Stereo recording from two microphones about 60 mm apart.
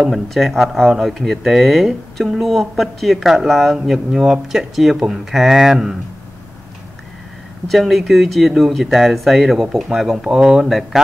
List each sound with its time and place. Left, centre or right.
0.0 s speech: centre
7.6 s speech: centre